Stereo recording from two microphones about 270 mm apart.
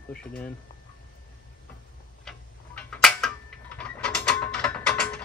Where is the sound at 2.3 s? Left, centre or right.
Centre.